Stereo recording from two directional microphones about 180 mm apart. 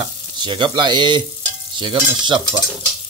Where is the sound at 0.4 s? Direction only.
25° right (ahead or behind).